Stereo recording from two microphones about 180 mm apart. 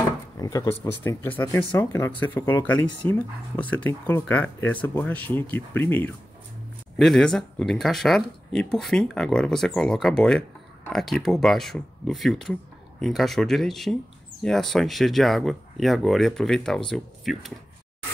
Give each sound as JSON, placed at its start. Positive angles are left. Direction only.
{"t": 0.4, "sound": "speech", "side_deg": 20}